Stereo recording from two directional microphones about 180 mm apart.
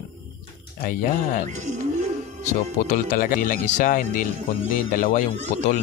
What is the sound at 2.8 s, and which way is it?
Speech, 45° left (ahead or behind).